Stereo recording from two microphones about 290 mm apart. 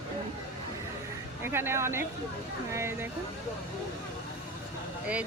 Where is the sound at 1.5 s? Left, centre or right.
Centre.